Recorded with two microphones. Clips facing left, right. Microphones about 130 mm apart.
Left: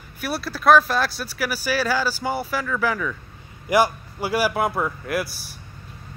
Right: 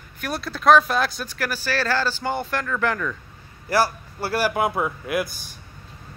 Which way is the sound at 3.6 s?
15° left (ahead or behind).